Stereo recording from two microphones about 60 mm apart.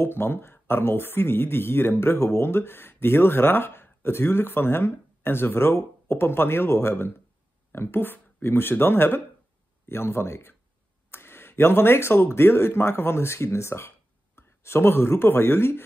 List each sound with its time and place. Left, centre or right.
0.0 s speech: left